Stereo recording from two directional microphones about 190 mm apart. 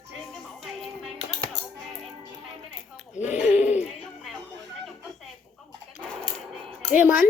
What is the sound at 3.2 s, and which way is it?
Speech, 40° left (ahead or behind).